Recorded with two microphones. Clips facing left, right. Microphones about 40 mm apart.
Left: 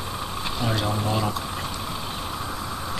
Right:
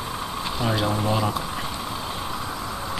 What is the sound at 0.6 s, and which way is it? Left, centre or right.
Speech, centre.